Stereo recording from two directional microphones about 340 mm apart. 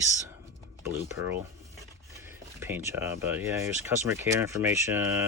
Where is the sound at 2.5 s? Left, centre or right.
Centre.